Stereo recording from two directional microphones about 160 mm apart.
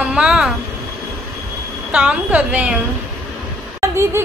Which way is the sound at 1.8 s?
10° right (ahead or behind).